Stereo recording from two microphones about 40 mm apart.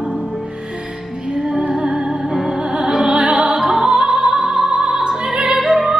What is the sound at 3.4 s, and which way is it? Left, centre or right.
Music, centre.